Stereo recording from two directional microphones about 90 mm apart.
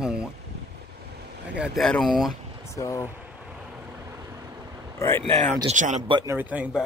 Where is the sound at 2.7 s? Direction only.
35° left (ahead or behind).